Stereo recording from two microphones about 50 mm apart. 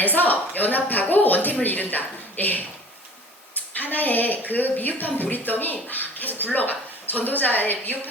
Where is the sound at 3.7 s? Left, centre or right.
Left.